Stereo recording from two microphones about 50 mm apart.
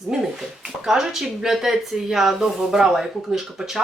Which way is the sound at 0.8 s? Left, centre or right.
Centre.